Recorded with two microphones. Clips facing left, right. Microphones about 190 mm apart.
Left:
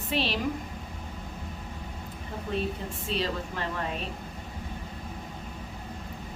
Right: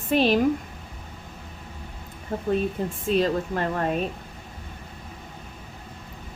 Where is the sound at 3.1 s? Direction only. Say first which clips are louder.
Right 8 dB; 50° right (ahead or behind).